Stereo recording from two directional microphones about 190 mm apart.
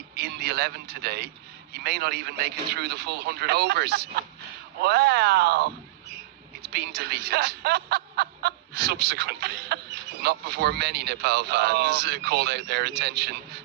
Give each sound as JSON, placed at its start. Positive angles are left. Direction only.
{"t": 0.2, "sound": "a man's voice", "side_deg": -60}
{"t": 6.7, "sound": "speech", "side_deg": -60}